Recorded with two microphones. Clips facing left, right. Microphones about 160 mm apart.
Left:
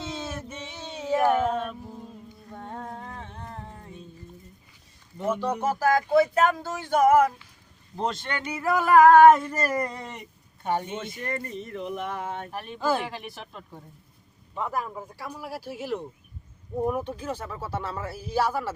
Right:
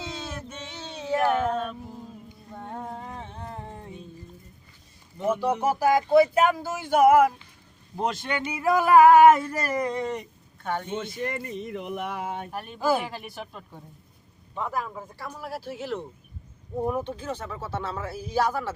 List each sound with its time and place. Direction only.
0.0 s music: centre (ahead or behind); by 3.9 s 15° right (ahead or behind)
5.2 s speech: 10° right (ahead or behind)
8.4 s a sound: 10° right (ahead or behind); by 10.2 s 5° left (ahead or behind)
10.6 s speech: 15° left (ahead or behind)
11.3 s speech: 10° right (ahead or behind)
12.8 s a sound: 10° right (ahead or behind)
14.5 s speech: 5° left (ahead or behind)